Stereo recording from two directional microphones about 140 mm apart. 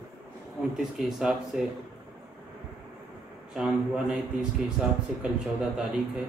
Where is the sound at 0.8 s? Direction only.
5° right (ahead or behind).